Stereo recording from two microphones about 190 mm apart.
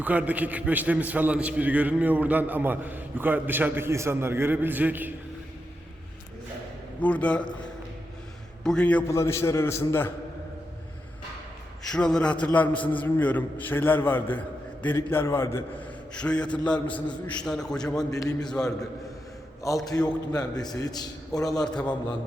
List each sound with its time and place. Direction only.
0.0 s a man's voice: 10° right (ahead or behind)
7.0 s a man's voice: 5° left (ahead or behind)
8.6 s a man's voice: 5° left (ahead or behind)
11.9 s a man's voice: 5° left (ahead or behind)
18.1 s a man's voice: 20° left (ahead or behind)
18.3 s a man's voice: 5° left (ahead or behind)
19.6 s a man's voice: 15° left (ahead or behind)
21.6 s a man's voice: 5° left (ahead or behind)